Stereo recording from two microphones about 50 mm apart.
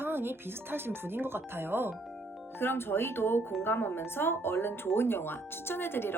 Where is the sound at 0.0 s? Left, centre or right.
Right.